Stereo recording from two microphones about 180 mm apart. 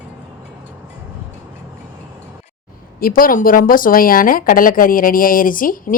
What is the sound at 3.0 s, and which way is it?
Speech, 55° left (ahead or behind).